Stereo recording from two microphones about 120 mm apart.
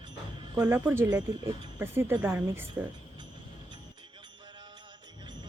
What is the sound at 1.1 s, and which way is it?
Speech, 35° right (ahead or behind).